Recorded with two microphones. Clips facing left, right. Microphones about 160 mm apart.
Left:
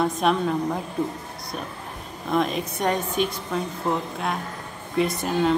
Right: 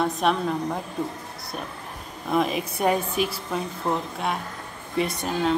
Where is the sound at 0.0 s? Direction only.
Centre (ahead or behind).